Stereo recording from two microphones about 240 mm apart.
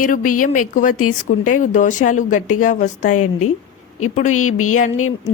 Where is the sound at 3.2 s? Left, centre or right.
Left.